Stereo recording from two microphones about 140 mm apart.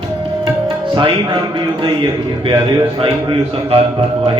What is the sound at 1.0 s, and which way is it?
Speech, 35° right (ahead or behind).